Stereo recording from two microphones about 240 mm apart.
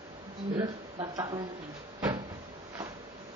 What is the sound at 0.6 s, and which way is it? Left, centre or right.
Speech, centre.